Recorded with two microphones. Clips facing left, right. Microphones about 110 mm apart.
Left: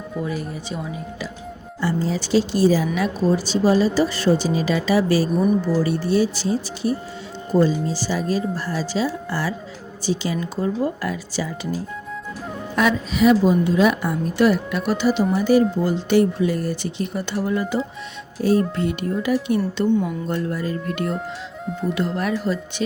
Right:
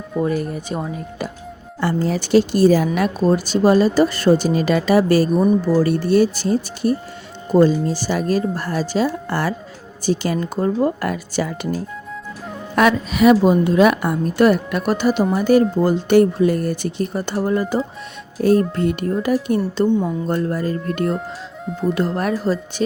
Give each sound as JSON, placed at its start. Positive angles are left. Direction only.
{"t": 0.2, "sound": "a woman's voice", "side_deg": -50}
{"t": 1.8, "sound": "a woman's voice", "side_deg": -60}
{"t": 18.4, "sound": "a woman's voice", "side_deg": -55}
{"t": 21.7, "sound": "speech", "side_deg": 0}
{"t": 21.9, "sound": "speech", "side_deg": -40}